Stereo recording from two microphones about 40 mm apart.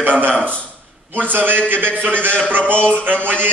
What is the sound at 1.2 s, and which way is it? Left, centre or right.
A man's voice, right.